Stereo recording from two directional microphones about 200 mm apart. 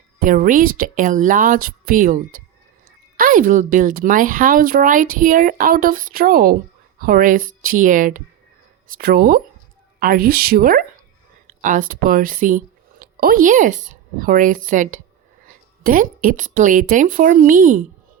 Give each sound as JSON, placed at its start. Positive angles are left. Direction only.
{"t": 0.2, "sound": "a woman's voice", "side_deg": -40}